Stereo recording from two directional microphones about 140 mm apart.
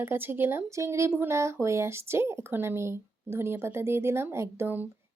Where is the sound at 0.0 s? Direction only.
15° right (ahead or behind).